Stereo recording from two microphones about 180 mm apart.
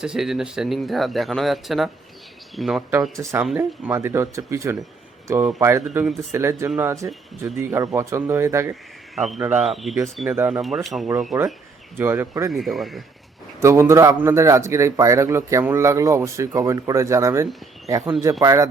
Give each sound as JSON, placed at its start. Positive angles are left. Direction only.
{"t": 0.0, "sound": "speech", "side_deg": -5}
{"t": 3.6, "sound": "a man's voice", "side_deg": -15}
{"t": 9.1, "sound": "speech", "side_deg": 0}
{"t": 9.4, "sound": "a man's voice", "side_deg": -10}
{"t": 9.6, "sound": "a man's voice", "side_deg": 0}
{"t": 12.5, "sound": "speech", "side_deg": 0}
{"t": 13.6, "sound": "a man's voice", "side_deg": -15}